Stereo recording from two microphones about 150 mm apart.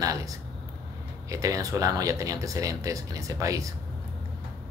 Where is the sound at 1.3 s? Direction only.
20° right (ahead or behind).